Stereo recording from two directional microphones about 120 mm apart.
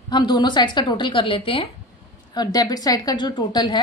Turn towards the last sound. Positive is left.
turn(degrees=35)  # may be behind; listen again after turning